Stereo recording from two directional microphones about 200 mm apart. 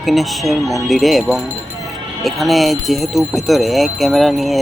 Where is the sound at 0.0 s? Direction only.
Centre (ahead or behind).